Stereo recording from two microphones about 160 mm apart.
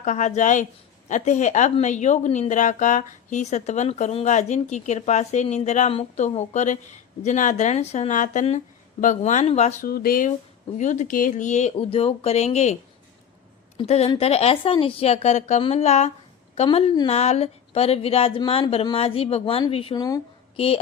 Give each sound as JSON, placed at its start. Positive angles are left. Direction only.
{"t": 0.0, "sound": "a woman's voice", "side_deg": 50}
{"t": 9.8, "sound": "speech", "side_deg": 70}
{"t": 10.8, "sound": "a woman's voice", "side_deg": 50}
{"t": 13.7, "sound": "speech", "side_deg": 40}
{"t": 20.0, "sound": "speech", "side_deg": 25}